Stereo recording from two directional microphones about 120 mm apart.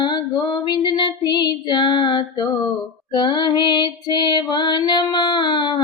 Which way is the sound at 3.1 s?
40° left (ahead or behind).